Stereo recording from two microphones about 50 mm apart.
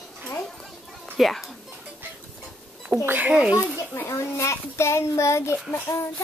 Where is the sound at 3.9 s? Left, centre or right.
Left.